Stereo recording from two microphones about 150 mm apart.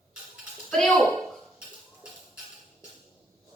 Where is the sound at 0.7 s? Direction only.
5° left (ahead or behind).